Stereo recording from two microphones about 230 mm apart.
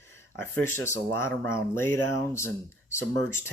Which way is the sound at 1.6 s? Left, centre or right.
Centre.